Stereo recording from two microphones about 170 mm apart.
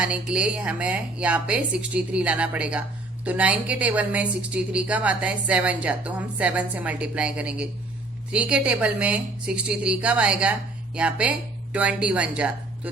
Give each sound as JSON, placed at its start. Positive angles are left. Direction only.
{"t": 0.0, "sound": "a woman's voice", "side_deg": -5}